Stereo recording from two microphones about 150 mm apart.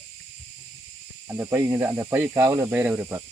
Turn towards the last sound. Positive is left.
turn(degrees=-15)  # may be behind; listen again after turning